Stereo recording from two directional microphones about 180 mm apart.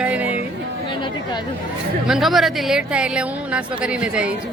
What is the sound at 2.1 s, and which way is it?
Speech, centre (ahead or behind).